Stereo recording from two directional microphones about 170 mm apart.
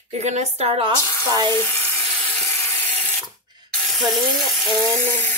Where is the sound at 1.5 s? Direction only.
10° left (ahead or behind).